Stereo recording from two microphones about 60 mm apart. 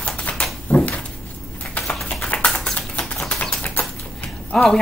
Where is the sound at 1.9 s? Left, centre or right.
Centre.